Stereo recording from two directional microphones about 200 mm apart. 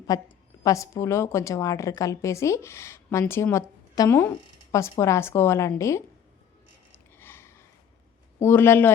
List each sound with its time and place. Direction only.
0.1 s a woman's voice: 15° left (ahead or behind)
7.2 s a sound: 10° left (ahead or behind)
8.4 s a woman's voice: 10° left (ahead or behind)